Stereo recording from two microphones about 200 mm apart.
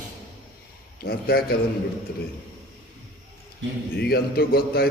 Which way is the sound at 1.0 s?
50° left (ahead or behind).